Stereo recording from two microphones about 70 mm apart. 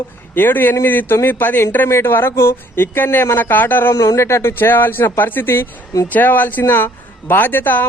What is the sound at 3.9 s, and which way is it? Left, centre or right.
Speech, left.